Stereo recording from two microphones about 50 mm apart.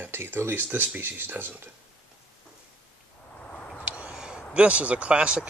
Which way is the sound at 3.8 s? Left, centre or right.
Right.